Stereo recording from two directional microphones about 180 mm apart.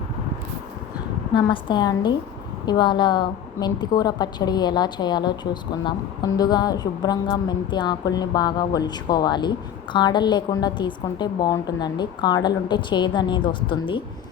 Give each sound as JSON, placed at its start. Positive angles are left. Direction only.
{"t": 1.3, "sound": "a woman's voice", "side_deg": 25}